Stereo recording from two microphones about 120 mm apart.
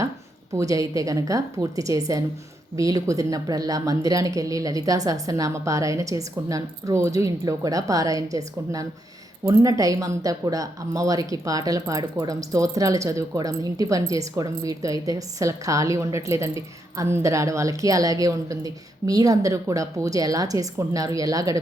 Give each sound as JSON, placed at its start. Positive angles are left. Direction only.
{"t": 0.5, "sound": "speech", "side_deg": -30}